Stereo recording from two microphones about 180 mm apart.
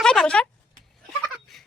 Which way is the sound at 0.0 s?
5° left (ahead or behind).